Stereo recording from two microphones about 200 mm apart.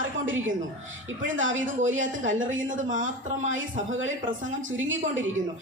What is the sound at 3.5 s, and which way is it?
Speech, 70° right (ahead or behind).